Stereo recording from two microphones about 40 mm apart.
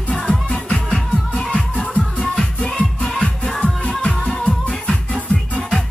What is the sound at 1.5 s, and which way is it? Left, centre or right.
Music, left.